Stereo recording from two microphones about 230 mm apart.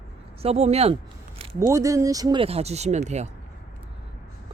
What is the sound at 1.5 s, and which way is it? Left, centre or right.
Speech, centre.